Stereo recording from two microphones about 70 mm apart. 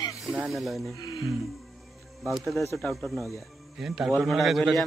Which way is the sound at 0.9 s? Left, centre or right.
Left.